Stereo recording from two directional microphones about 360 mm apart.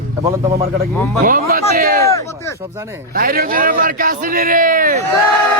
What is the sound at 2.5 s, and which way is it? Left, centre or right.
Speech, centre.